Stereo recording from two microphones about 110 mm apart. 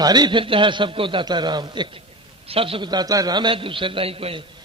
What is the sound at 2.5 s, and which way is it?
A man's voice, 60° right (ahead or behind).